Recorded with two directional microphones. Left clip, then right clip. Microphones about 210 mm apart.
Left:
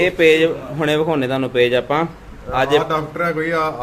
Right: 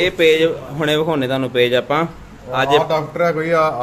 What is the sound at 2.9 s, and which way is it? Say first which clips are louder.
Speech: right 3 dB; 25° right (ahead or behind).